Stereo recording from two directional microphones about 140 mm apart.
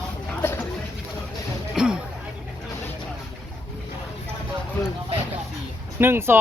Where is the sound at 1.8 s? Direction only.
5° right (ahead or behind).